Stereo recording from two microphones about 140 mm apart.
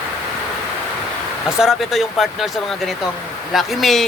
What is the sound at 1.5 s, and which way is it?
Speech, 5° right (ahead or behind).